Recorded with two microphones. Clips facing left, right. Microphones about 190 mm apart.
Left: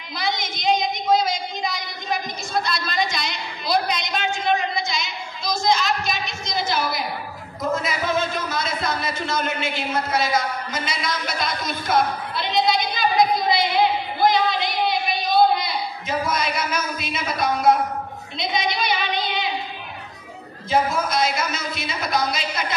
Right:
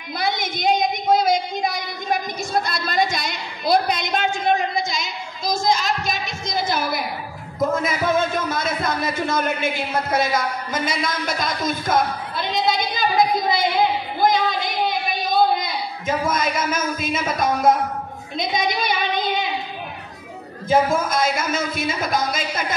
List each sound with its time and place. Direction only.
0.2 s a sound: 55° right (ahead or behind)
10.1 s a woman's voice: 50° right (ahead or behind)
14.2 s a sound: 45° right (ahead or behind)
15.6 s speech: 50° right (ahead or behind)
18.4 s child singing: 50° right (ahead or behind)
20.9 s speech: 50° right (ahead or behind)